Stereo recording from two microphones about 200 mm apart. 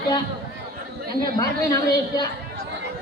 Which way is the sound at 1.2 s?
20° left (ahead or behind).